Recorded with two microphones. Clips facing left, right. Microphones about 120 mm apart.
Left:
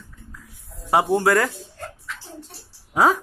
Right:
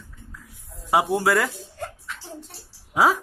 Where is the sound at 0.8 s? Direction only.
Centre (ahead or behind).